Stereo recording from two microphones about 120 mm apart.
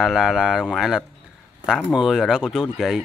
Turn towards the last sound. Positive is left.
turn(degrees=-5)  # may be behind; listen again after turning